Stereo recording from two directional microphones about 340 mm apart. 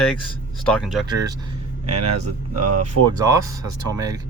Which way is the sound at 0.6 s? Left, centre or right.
Centre.